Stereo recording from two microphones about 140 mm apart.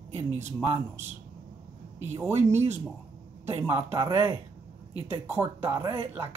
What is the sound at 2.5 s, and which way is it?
Speech, 50° right (ahead or behind).